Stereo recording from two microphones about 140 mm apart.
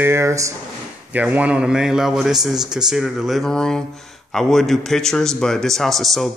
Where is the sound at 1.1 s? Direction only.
10° right (ahead or behind).